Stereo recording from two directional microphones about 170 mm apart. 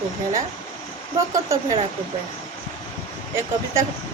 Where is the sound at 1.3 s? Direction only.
20° right (ahead or behind).